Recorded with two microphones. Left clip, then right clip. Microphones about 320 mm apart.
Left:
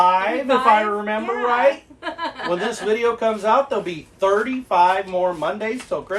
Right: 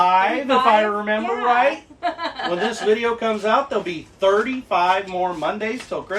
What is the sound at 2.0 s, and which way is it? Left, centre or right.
Chuckle, centre.